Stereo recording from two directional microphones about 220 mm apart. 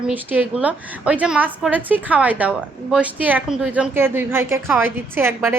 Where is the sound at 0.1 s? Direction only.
10° right (ahead or behind).